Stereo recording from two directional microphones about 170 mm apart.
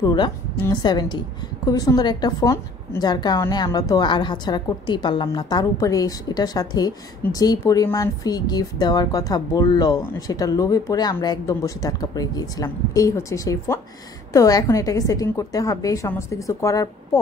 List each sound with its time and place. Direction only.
0.0 s speech: 25° left (ahead or behind)